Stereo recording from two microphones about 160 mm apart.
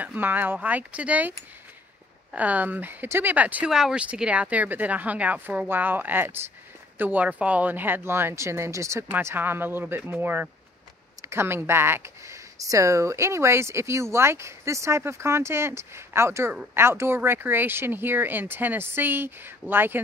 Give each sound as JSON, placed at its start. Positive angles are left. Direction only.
{"t": 0.0, "sound": "speech", "side_deg": -10}
{"t": 2.3, "sound": "speech", "side_deg": -10}